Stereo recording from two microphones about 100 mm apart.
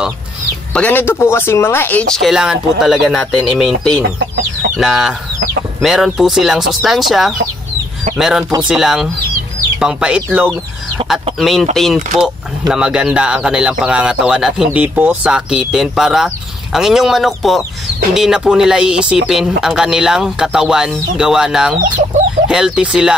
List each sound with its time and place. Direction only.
0.7 s speech: 20° left (ahead or behind)
2.1 s speech: 5° right (ahead or behind)
4.7 s speech: 5° right (ahead or behind)
11.0 s speech: 55° right (ahead or behind)
11.3 s speech: centre (ahead or behind)